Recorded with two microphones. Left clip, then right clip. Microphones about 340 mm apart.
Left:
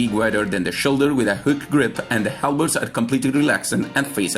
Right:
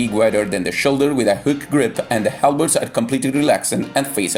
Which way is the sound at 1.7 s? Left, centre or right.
Right.